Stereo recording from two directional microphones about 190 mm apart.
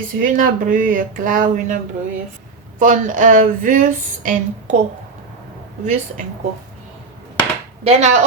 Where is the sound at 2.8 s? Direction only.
45° right (ahead or behind).